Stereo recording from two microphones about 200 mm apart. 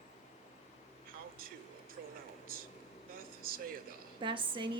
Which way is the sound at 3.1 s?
45° right (ahead or behind).